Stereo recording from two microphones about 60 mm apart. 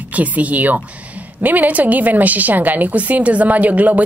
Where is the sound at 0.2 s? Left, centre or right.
Right.